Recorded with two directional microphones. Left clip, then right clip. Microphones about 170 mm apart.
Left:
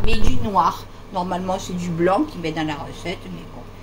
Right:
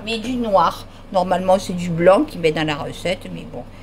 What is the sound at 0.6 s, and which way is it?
Speech, 80° right.